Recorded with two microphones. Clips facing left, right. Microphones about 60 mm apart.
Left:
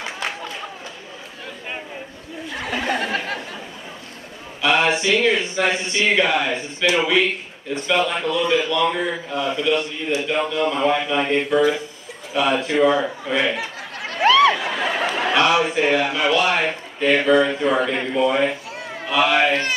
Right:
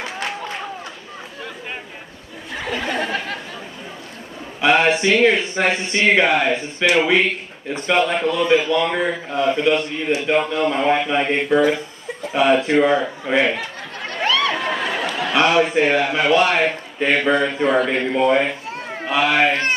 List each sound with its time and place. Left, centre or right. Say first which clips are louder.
2.7 s a sound: left 1 dB; centre
4.6 s a man's voice: right 3 dB; right
13.6 s a sound: even; centre
15.3 s speech: right 3 dB; right
17.8 s a man's voice: right 2 dB; right
18.2 s a man's voice: right 1 dB; right